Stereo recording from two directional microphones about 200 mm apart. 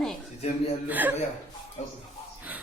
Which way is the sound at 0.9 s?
10° right (ahead or behind).